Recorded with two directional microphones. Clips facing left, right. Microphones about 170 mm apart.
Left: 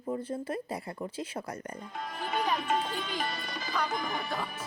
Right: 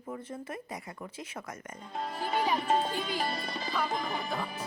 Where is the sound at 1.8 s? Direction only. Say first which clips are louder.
Right 7 dB; 30° right (ahead or behind).